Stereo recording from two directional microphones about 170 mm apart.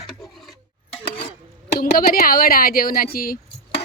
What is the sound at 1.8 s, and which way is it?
Speech, 55° left (ahead or behind).